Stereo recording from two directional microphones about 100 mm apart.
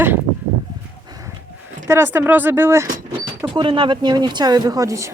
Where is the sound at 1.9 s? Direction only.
20° right (ahead or behind).